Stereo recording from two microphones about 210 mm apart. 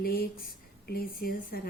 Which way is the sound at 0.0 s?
45° left (ahead or behind).